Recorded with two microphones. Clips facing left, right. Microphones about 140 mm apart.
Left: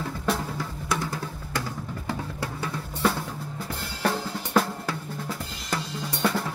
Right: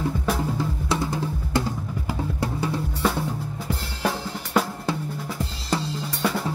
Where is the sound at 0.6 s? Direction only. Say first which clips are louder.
Right 4 dB; 20° right (ahead or behind).